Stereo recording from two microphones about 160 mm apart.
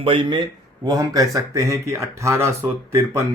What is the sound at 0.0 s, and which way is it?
A man's voice, 30° right (ahead or behind).